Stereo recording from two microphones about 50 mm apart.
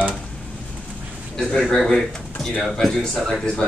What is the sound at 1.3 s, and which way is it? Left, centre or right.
Speech, centre.